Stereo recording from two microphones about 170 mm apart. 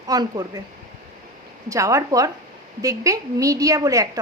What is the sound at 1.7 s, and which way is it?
A woman's voice, 20° right (ahead or behind).